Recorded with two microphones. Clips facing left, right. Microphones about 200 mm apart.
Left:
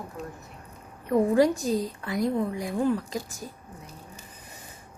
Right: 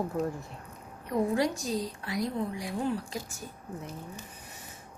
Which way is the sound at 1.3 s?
50° left (ahead or behind).